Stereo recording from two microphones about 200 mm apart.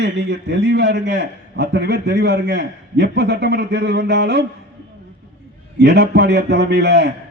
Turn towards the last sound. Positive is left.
turn(degrees=-55)  # may be behind; listen again after turning